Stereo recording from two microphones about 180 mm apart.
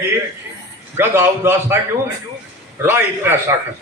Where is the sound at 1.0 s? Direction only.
15° right (ahead or behind).